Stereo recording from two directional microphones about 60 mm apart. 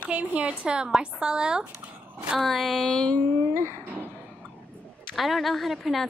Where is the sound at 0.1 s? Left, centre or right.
Right.